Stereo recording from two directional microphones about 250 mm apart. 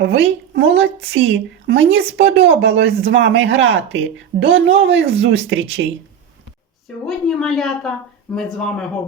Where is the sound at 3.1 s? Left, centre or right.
Right.